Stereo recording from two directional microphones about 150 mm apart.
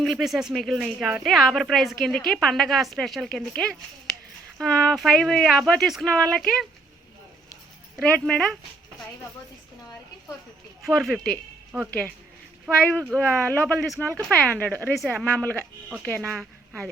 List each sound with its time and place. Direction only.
0.0 s a woman's voice: centre (ahead or behind)
7.9 s speech: 5° left (ahead or behind)
10.8 s a woman's voice: centre (ahead or behind)
11.7 s speech: 15° right (ahead or behind)
12.8 s a woman's voice: 10° left (ahead or behind)